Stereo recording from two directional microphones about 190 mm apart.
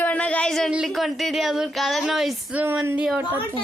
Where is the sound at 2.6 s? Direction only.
15° right (ahead or behind).